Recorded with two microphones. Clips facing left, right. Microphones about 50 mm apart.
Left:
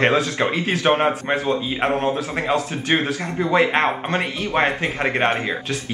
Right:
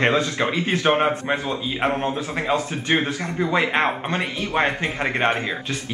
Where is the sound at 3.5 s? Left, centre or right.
Centre.